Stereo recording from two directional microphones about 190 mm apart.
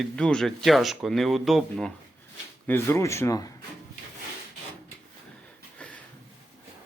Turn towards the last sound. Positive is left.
turn(degrees=5)  # may be behind; listen again after turning